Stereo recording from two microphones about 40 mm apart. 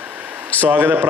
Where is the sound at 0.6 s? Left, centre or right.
Right.